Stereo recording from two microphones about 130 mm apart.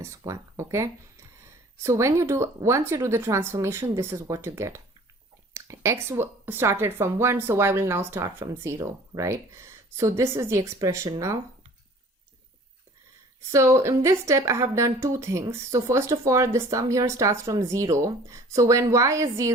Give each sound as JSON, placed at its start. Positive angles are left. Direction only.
{"t": 0.0, "sound": "speech", "side_deg": -20}
{"t": 13.5, "sound": "speech", "side_deg": -20}